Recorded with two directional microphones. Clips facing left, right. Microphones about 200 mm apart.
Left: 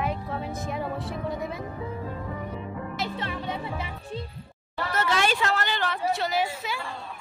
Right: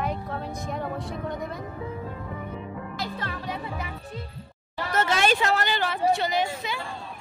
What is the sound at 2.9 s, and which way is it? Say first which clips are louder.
Speech: left 2 dB; 25° left (ahead or behind).